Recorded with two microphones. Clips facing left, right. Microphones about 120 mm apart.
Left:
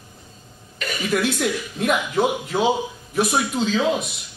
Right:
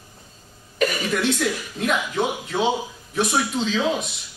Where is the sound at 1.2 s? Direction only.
5° left (ahead or behind).